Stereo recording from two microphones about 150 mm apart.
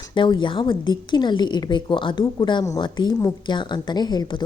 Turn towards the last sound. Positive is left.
turn(degrees=30)  # may be behind; listen again after turning